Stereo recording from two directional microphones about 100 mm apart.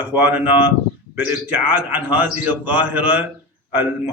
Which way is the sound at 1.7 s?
15° right (ahead or behind).